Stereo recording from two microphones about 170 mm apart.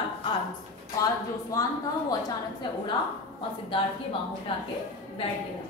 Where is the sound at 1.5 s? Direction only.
20° left (ahead or behind).